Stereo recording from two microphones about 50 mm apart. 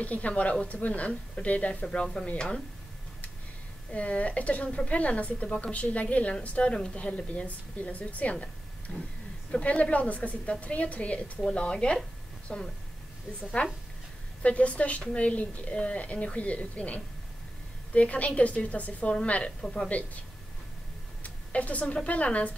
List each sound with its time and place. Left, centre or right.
0.0 s a woman's voice: left
3.9 s a woman's voice: left
9.5 s a woman's voice: left
19.6 s speech: centre
21.2 s a sound: left
21.9 s a woman's voice: left